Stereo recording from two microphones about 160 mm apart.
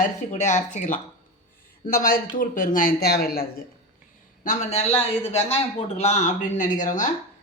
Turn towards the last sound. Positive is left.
turn(degrees=55)  # may be behind; listen again after turning